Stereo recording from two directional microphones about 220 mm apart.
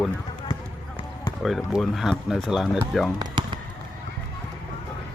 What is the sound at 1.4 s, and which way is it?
Speech, centre (ahead or behind).